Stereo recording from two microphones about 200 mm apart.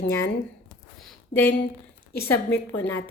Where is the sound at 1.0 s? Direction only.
5° left (ahead or behind).